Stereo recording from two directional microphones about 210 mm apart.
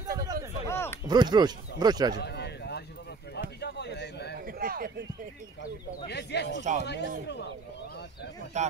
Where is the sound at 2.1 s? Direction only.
50° left (ahead or behind).